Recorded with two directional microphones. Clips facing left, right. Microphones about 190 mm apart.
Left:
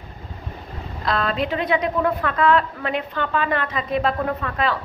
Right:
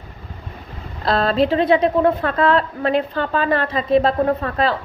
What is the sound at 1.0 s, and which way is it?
A woman's voice, 35° right (ahead or behind).